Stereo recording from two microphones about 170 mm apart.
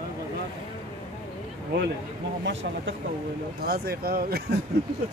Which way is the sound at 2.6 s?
85° right.